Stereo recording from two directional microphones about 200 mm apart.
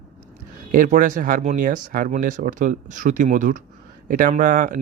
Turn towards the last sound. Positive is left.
turn(degrees=-40)  # may be behind; listen again after turning